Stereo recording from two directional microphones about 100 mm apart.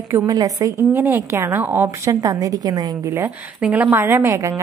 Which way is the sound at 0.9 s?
20° right (ahead or behind).